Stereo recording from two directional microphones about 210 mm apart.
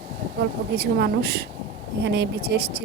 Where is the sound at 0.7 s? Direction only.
50° right (ahead or behind).